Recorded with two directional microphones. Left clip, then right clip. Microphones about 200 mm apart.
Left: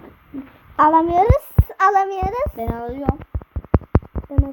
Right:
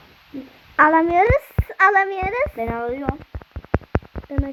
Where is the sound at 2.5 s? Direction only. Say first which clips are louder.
Right 2 dB; 5° left (ahead or behind).